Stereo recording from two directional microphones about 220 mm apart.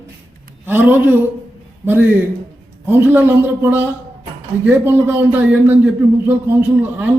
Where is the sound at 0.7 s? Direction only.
10° right (ahead or behind).